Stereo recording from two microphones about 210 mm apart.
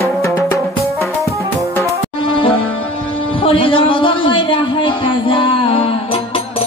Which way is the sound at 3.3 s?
25° left (ahead or behind).